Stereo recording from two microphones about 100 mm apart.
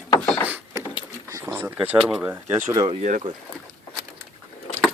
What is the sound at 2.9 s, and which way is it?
Speech, 70° right (ahead or behind).